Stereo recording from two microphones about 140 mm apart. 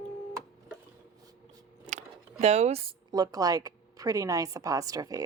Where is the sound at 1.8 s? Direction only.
55° right (ahead or behind).